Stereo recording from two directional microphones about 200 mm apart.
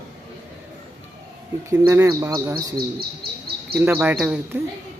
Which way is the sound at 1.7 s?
15° right (ahead or behind).